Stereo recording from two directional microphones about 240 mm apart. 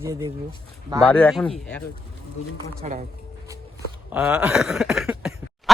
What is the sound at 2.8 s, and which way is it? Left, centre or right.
Speech, right.